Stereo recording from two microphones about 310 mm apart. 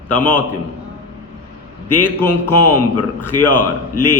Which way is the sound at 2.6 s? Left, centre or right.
Left.